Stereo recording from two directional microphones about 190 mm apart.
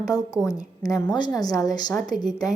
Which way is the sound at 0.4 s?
20° left (ahead or behind).